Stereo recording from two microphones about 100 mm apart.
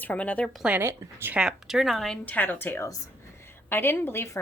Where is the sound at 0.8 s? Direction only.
20° right (ahead or behind).